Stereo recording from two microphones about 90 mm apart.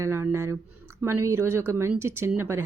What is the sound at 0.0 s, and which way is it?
Speech, 30° right (ahead or behind).